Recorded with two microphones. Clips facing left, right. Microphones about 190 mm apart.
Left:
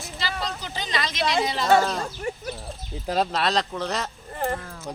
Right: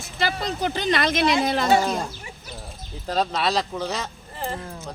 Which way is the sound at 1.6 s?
10° right (ahead or behind).